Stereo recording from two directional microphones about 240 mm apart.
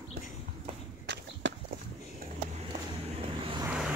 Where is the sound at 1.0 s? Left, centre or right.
Right.